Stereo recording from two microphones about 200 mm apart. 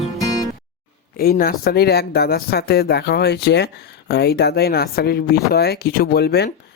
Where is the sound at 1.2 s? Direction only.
50° left (ahead or behind).